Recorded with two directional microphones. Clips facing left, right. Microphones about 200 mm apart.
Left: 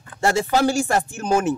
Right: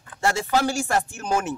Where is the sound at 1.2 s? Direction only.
25° left (ahead or behind).